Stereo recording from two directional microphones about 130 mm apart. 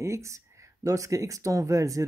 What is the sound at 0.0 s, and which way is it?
Speech, 25° right (ahead or behind).